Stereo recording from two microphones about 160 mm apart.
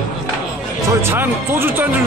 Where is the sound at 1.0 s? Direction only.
15° right (ahead or behind).